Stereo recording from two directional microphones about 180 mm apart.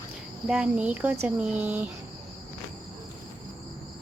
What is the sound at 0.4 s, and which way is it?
Speech, 5° right (ahead or behind).